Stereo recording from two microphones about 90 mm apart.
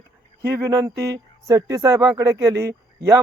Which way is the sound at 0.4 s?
40° right (ahead or behind).